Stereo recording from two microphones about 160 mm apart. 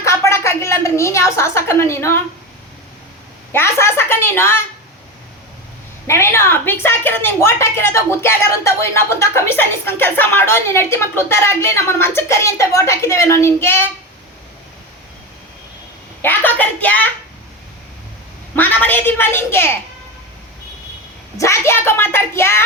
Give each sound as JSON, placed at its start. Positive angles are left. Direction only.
{"t": 0.0, "sound": "a sound", "side_deg": 20}
{"t": 3.5, "sound": "a woman's voice", "side_deg": 15}
{"t": 6.1, "sound": "a woman's voice", "side_deg": 15}
{"t": 16.2, "sound": "speech", "side_deg": 10}
{"t": 18.5, "sound": "a woman's voice", "side_deg": 10}
{"t": 21.3, "sound": "a woman's voice", "side_deg": 20}